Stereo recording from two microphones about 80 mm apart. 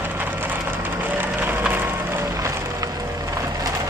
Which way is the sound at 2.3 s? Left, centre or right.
Right.